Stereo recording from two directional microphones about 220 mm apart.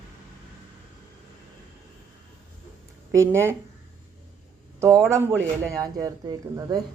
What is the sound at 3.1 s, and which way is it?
Speech, 10° right (ahead or behind).